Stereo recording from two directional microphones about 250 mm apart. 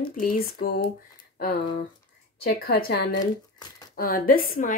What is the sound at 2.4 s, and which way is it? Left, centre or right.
Speech, left.